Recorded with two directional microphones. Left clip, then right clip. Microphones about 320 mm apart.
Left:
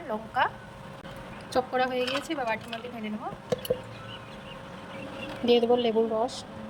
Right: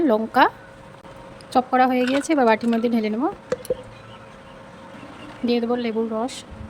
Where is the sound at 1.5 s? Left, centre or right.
Centre.